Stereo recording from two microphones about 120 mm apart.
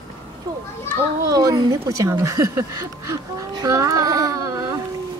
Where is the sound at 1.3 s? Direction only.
30° right (ahead or behind).